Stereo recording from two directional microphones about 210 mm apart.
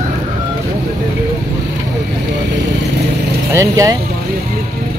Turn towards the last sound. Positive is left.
turn(degrees=-15)  # may be behind; listen again after turning